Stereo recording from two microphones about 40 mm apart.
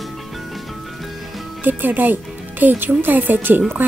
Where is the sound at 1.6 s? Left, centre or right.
Right.